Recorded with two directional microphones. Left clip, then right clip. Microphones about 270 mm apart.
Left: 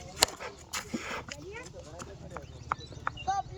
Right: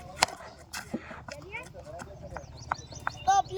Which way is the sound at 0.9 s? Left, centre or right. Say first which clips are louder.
Left 3 dB; left.